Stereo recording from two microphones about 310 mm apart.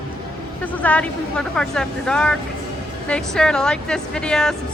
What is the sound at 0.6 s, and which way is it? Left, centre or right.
A woman's voice, centre.